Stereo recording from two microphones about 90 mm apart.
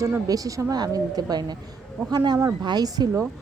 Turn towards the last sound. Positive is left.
turn(degrees=-50)  # may be behind; listen again after turning